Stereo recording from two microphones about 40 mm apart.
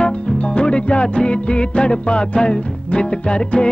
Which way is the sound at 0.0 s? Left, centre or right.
Left.